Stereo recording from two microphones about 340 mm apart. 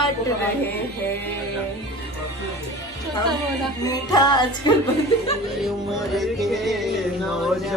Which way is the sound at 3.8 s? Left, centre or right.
Centre.